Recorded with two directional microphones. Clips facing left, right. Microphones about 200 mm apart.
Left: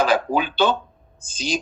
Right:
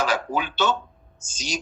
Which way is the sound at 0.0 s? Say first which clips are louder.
Left 5 dB; 55° left (ahead or behind).